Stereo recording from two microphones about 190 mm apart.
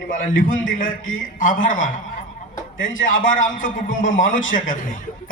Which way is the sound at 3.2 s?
45° left (ahead or behind).